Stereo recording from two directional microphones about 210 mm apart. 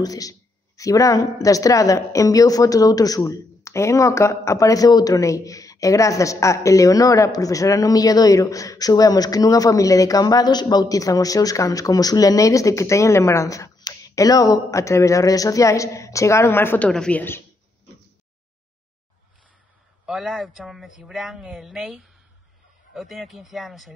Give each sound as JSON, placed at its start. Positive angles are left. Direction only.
{"t": 0.0, "sound": "speech", "side_deg": 15}
{"t": 20.1, "sound": "a woman's voice", "side_deg": 0}